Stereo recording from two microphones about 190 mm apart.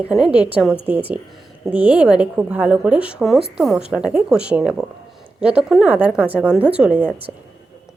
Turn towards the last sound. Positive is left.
turn(degrees=-5)  # may be behind; listen again after turning